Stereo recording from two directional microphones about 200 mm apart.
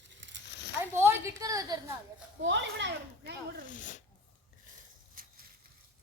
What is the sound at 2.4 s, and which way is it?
Speech, 65° right (ahead or behind).